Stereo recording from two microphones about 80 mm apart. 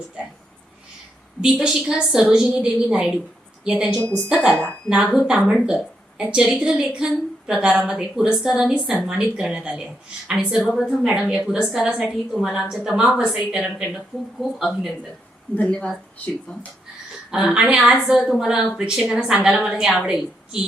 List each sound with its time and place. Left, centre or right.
1.4 s a woman's voice: centre
4.4 s speech: centre
4.9 s a woman's voice: centre
5.2 s a woman's voice: centre
10.6 s a woman's voice: centre
11.0 s a woman's voice: centre
14.6 s a woman's voice: centre
15.5 s speech: centre
17.3 s a woman's voice: centre